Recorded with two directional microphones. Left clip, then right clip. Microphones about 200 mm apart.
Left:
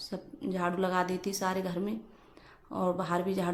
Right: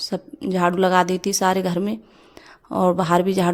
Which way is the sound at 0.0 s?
45° right (ahead or behind).